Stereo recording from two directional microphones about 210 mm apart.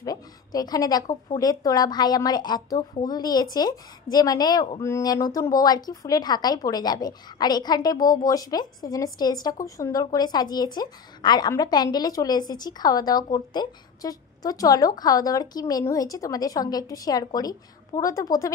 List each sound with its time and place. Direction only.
0.0 s a woman's voice: 15° left (ahead or behind)